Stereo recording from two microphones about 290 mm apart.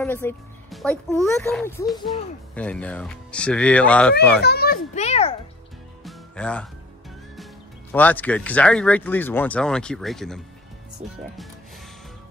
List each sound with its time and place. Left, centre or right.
0.0 s speech: centre
4.4 s a child's voice: left
6.0 s music: centre
7.9 s speech: centre